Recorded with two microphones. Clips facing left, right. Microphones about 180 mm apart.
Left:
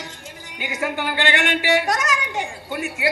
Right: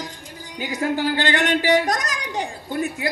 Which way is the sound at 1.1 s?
40° right (ahead or behind).